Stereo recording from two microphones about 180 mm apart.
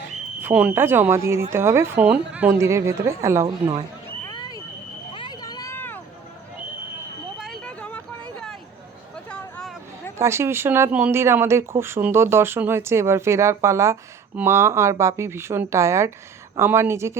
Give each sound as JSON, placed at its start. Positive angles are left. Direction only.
{"t": 0.4, "sound": "speech", "side_deg": -10}
{"t": 4.3, "sound": "vehicle", "side_deg": 25}
{"t": 5.1, "sound": "a sound", "side_deg": 25}
{"t": 7.3, "sound": "vehicle", "side_deg": 0}
{"t": 9.3, "sound": "a sound", "side_deg": 5}
{"t": 10.2, "sound": "speech", "side_deg": -15}